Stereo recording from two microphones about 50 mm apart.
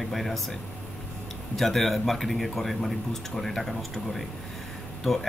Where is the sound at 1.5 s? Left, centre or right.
Centre.